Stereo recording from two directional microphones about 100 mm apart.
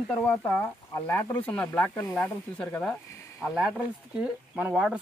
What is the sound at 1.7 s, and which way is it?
Speech, 25° left (ahead or behind).